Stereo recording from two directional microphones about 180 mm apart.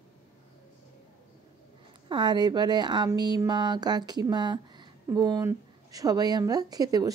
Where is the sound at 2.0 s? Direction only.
25° right (ahead or behind).